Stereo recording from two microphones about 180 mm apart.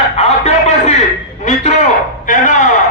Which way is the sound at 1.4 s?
40° left (ahead or behind).